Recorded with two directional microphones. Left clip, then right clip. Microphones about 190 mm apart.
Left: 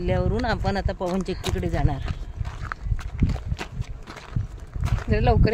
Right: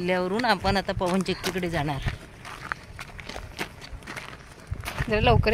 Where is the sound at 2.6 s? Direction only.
Centre (ahead or behind).